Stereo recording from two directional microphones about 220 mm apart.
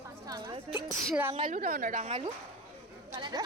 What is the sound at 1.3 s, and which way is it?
Speech, 35° right (ahead or behind).